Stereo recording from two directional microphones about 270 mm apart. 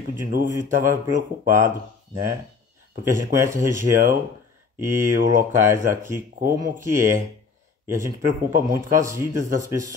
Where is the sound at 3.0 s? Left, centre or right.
Centre.